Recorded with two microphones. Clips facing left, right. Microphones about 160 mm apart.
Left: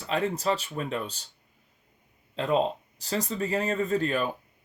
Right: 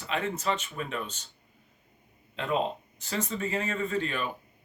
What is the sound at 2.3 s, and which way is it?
Speech, 35° left (ahead or behind).